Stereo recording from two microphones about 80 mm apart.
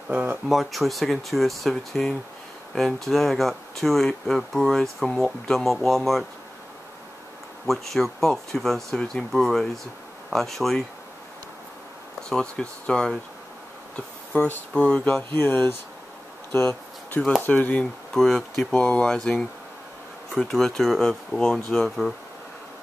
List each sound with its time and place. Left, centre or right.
0.1 s speech: right
0.5 s speech: centre
7.6 s speech: centre
12.2 s speech: centre
14.3 s speech: left
14.7 s speech: centre
15.3 s speech: left
16.5 s a sound: left
17.4 s speech: left
18.1 s speech: centre
20.3 s speech: centre